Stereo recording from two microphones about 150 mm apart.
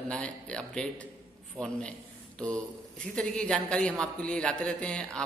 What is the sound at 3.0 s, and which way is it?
A man's voice, 5° left (ahead or behind).